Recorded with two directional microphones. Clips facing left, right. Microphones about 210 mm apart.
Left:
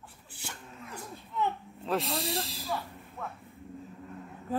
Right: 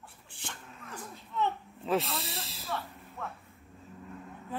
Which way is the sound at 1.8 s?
Centre (ahead or behind).